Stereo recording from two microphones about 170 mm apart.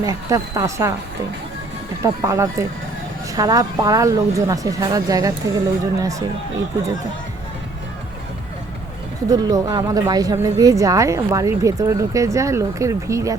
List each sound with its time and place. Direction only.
0.0 s a woman's voice: 20° right (ahead or behind)
2.0 s a woman's voice: 20° right (ahead or behind)
9.3 s a woman's voice: 20° right (ahead or behind)